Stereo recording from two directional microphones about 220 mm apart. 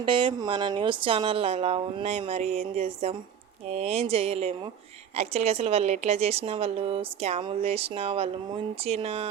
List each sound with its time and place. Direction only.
0.0 s a woman's voice: 25° right (ahead or behind)